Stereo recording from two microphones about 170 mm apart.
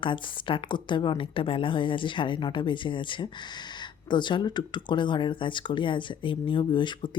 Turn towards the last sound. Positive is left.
turn(degrees=25)  # may be behind; listen again after turning